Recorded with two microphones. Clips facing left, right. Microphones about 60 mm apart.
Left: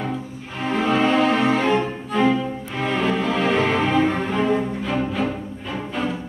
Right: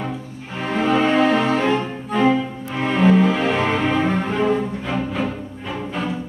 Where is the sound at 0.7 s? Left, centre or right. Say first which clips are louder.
Right 1 dB; centre.